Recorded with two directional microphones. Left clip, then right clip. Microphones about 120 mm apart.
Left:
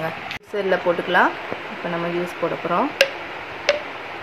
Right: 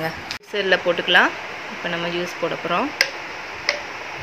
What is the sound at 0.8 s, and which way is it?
Speech, 20° right (ahead or behind).